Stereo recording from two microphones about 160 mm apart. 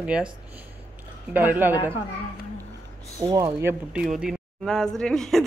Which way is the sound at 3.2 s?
25° right (ahead or behind).